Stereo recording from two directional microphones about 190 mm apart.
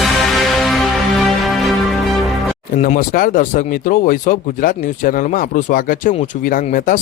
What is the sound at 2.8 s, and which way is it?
Speech, 45° left (ahead or behind).